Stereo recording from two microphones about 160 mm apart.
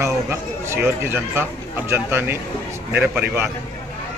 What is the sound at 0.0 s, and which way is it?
Speech, 15° right (ahead or behind).